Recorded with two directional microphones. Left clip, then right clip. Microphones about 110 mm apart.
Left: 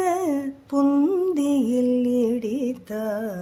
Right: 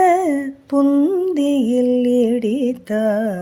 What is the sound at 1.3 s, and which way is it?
Music, 25° right (ahead or behind).